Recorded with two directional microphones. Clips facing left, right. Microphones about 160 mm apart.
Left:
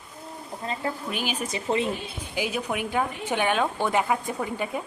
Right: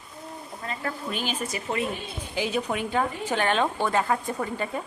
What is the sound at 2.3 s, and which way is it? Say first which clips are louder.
A woman's voice: right 1 dB; 10° left (ahead or behind).